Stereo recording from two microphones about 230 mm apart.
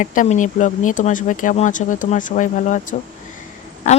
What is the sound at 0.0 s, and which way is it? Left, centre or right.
Speech, left.